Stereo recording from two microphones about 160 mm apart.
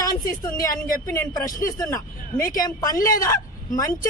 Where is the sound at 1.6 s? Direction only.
20° left (ahead or behind).